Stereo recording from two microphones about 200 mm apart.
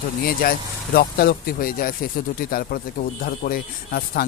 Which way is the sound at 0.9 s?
50° left (ahead or behind).